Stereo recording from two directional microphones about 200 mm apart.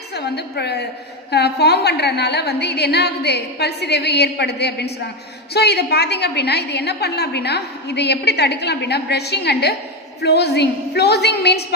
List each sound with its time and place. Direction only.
0.1 s a woman's voice: 55° left (ahead or behind)